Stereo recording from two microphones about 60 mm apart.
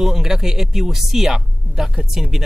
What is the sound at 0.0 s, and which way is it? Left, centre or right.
Speech, centre.